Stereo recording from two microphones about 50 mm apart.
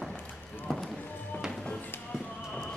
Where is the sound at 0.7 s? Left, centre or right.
Centre.